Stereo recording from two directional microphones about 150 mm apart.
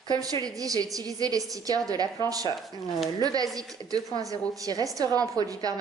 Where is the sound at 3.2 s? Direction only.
25° right (ahead or behind).